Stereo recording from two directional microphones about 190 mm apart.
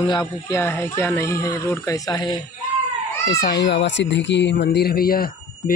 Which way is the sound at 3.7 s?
65° left (ahead or behind).